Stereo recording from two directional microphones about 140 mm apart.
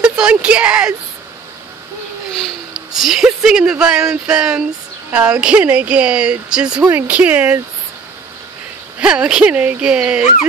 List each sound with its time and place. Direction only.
0.0 s a woman's voice: 10° right (ahead or behind)
3.0 s speech: centre (ahead or behind)
9.0 s speech: 5° right (ahead or behind)